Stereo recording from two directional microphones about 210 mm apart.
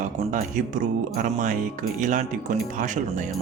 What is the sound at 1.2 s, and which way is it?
A man's voice, 35° right (ahead or behind).